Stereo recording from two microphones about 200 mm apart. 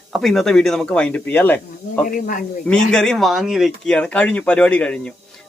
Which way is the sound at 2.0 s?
40° left (ahead or behind).